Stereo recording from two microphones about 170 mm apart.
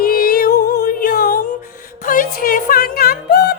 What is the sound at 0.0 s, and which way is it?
Music, 60° left (ahead or behind).